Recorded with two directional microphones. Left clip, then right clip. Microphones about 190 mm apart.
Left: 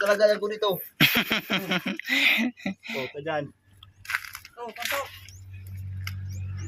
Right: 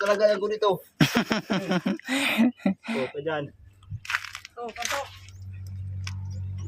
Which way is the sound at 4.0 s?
5° right (ahead or behind).